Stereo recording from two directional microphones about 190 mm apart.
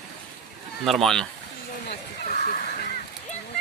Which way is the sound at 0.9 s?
Centre (ahead or behind).